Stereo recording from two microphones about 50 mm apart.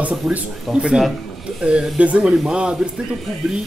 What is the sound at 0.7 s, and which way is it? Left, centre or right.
Speech, centre.